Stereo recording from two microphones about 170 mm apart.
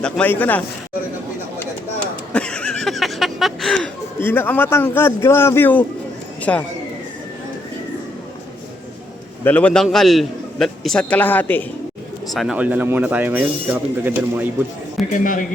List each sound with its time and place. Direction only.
0.0 s a man's voice: 10° left (ahead or behind)
2.3 s a sound: 5° left (ahead or behind)
4.2 s a man's voice: 10° left (ahead or behind)
9.4 s a man's voice: 10° left (ahead or behind)
12.3 s speech: centre (ahead or behind)
15.1 s speech: 50° left (ahead or behind)